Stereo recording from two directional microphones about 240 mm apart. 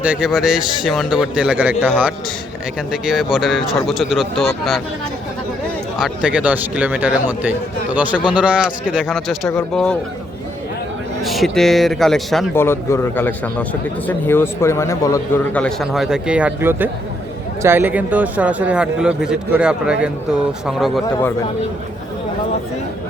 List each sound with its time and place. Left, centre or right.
0.0 s speech: centre
6.0 s speech: centre
11.2 s speech: centre